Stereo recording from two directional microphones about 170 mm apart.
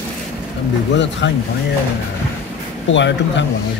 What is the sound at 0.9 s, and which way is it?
Speech, 90° left.